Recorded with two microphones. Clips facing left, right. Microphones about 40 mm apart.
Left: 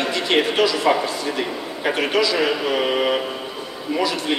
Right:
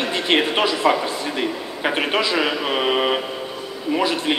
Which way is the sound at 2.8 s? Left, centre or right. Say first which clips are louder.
Right 3 dB; centre.